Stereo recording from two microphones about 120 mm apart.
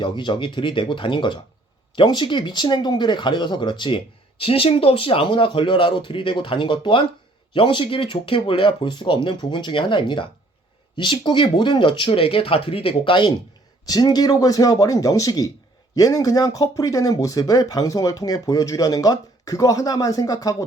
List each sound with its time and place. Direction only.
0.0 s speech: 40° left (ahead or behind)
13.8 s speech: 35° left (ahead or behind)